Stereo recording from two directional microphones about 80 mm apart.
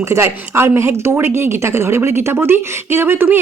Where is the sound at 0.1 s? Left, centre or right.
Right.